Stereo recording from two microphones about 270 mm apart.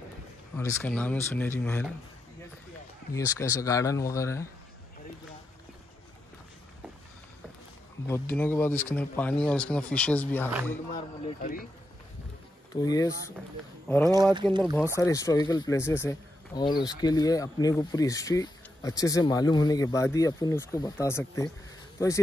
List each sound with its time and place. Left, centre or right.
0.6 s speech: centre
3.3 s speech: centre
8.1 s speech: centre
10.9 s speech: left
12.7 s speech: centre
14.1 s speech: centre
15.0 s speech: centre